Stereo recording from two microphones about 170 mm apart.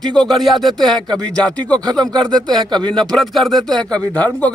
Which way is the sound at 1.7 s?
25° right (ahead or behind).